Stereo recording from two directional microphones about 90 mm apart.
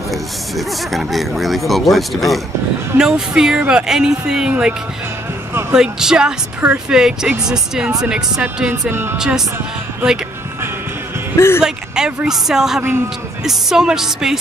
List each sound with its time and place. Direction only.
0.1 s speech: centre (ahead or behind)
8.9 s speech: 25° right (ahead or behind)
11.3 s speech: 30° left (ahead or behind)
11.6 s speech: 10° right (ahead or behind)